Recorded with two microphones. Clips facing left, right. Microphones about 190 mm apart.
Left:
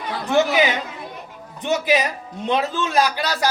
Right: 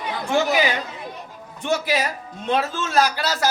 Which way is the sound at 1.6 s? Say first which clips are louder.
Left 3 dB; 20° left (ahead or behind).